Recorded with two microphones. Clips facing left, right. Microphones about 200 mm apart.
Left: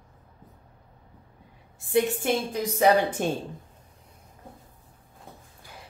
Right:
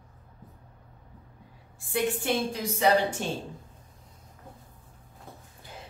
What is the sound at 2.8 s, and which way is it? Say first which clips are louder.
Speech: left 3 dB; 50° left (ahead or behind).